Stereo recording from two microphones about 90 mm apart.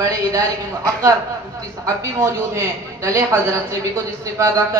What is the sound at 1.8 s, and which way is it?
A man's voice, 35° right (ahead or behind).